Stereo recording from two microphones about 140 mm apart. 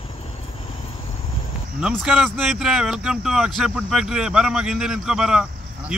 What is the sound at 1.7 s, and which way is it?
Speech, 5° right (ahead or behind).